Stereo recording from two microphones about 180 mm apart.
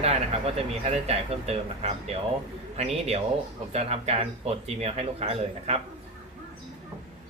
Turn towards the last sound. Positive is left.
turn(degrees=-35)  # may be behind; listen again after turning